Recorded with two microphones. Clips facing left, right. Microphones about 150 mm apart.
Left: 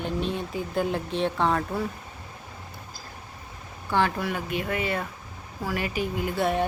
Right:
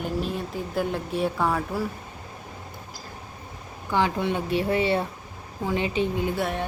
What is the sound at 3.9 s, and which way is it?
Speech, 15° right (ahead or behind).